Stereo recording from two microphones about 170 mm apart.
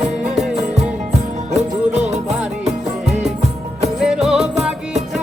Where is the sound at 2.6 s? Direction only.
40° right (ahead or behind).